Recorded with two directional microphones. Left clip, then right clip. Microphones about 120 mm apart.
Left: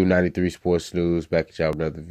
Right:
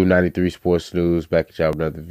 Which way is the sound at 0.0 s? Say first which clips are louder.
Right 3 dB; 30° right (ahead or behind).